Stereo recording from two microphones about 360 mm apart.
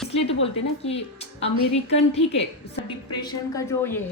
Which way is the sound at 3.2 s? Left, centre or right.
Centre.